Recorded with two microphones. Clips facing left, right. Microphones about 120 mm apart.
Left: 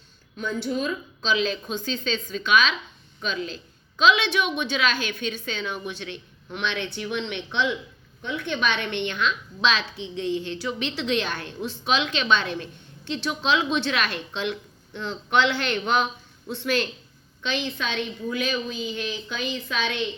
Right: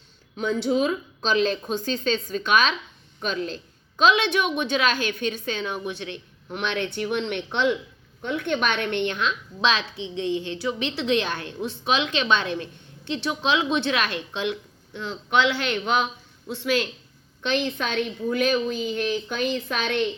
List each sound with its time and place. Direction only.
0.3 s speech: 75° right (ahead or behind)
1.2 s a woman's voice: 50° right (ahead or behind)
10.2 s a woman's voice: 20° right (ahead or behind)
14.9 s a woman's voice: 5° right (ahead or behind)
17.4 s a woman's voice: 50° right (ahead or behind)